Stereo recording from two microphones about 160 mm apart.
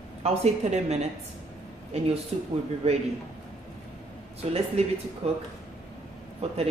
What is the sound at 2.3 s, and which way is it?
Speech, 40° right (ahead or behind).